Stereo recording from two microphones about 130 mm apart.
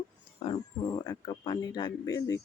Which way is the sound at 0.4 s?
45° left (ahead or behind).